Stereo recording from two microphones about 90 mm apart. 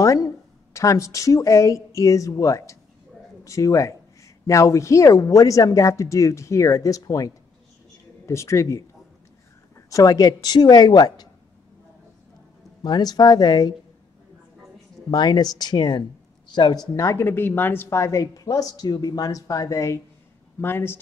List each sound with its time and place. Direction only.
0.0 s a sound: 35° left (ahead or behind)
0.7 s speech: 35° left (ahead or behind)
9.8 s speech: 40° left (ahead or behind)
12.8 s speech: 50° left (ahead or behind)
15.0 s speech: 50° left (ahead or behind); by 17.8 s 20° left (ahead or behind)
17.8 s speech: 30° left (ahead or behind)